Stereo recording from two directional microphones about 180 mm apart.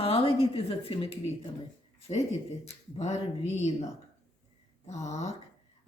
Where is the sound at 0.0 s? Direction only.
35° left (ahead or behind).